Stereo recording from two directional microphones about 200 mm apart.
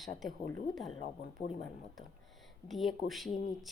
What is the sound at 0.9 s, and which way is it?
Speech, 30° left (ahead or behind).